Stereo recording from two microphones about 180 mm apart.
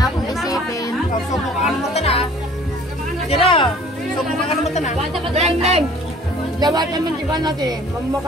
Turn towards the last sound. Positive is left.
turn(degrees=-25)  # may be behind; listen again after turning